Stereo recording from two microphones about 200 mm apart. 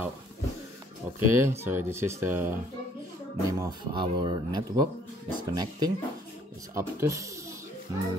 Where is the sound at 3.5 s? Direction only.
20° right (ahead or behind).